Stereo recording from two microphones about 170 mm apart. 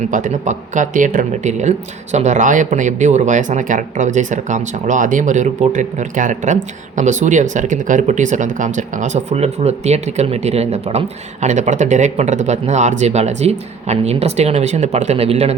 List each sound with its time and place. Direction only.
0.1 s speech: 45° right (ahead or behind)